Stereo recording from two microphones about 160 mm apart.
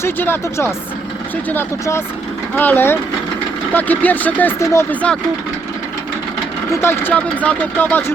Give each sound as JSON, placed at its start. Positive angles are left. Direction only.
{"t": 0.0, "sound": "speech", "side_deg": 15}
{"t": 6.7, "sound": "speech", "side_deg": 15}